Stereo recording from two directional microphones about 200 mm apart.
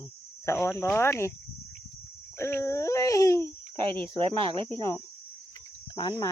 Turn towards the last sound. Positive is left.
turn(degrees=25)  # may be behind; listen again after turning